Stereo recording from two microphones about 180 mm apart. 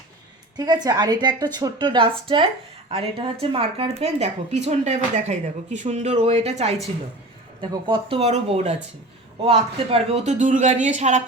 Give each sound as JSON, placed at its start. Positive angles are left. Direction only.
{"t": 0.5, "sound": "speech", "side_deg": -20}